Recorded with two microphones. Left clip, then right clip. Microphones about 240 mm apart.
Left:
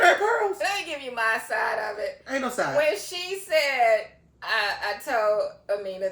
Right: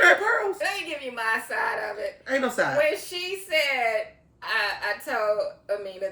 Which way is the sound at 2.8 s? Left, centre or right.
Centre.